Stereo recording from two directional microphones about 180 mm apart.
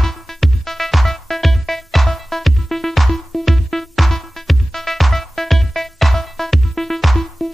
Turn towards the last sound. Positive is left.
turn(degrees=0)  # may be behind; listen again after turning